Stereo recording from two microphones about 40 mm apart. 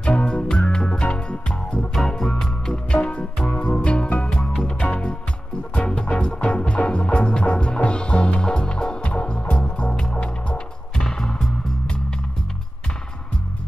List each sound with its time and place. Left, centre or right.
0.0 s music: left
2.0 s music: centre; by 5.1 s left
5.8 s music: left
11.0 s music: centre